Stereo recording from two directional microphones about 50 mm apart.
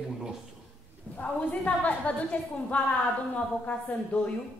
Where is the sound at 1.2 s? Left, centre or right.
Left.